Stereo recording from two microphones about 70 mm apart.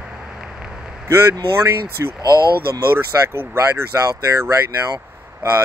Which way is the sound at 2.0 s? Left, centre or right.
Right.